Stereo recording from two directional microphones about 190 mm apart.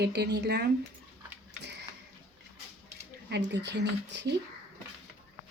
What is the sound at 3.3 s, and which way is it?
A woman's voice, 65° right (ahead or behind).